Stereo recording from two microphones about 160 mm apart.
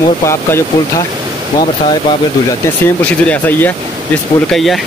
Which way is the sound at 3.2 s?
10° left (ahead or behind).